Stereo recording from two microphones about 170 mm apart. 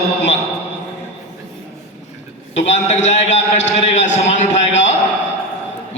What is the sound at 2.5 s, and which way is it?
A man's voice, 40° left (ahead or behind).